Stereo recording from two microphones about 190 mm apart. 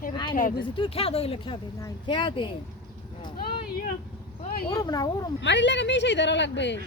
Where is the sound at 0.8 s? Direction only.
30° left (ahead or behind).